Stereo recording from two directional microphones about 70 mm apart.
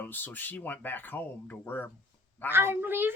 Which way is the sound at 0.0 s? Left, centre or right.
Left.